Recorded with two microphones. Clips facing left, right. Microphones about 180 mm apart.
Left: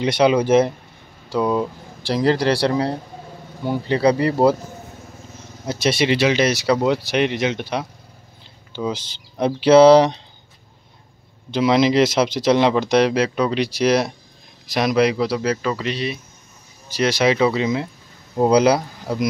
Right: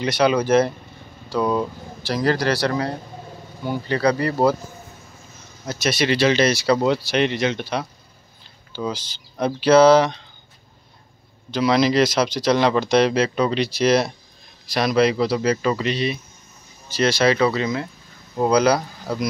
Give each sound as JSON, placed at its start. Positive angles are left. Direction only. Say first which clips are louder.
{"t": 0.0, "sound": "speech", "louder": "left 2 dB", "side_deg": 25}
{"t": 1.4, "sound": "speech", "louder": "left 1 dB", "side_deg": 5}
{"t": 2.0, "sound": "speech", "louder": "left 3 dB", "side_deg": 30}
{"t": 5.7, "sound": "speech", "louder": "left 2 dB", "side_deg": 30}
{"t": 8.9, "sound": "speech", "louder": "left 2 dB", "side_deg": 25}
{"t": 11.5, "sound": "speech", "louder": "left 2 dB", "side_deg": 25}
{"t": 16.9, "sound": "speech", "louder": "even", "side_deg": 15}